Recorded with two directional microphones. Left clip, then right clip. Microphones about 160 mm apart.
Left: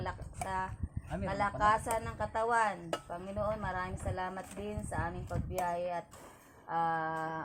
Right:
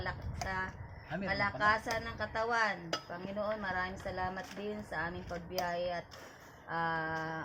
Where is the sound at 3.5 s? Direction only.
20° right (ahead or behind).